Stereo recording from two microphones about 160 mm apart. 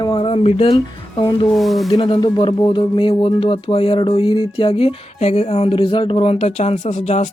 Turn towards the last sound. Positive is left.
turn(degrees=50)  # may be behind; listen again after turning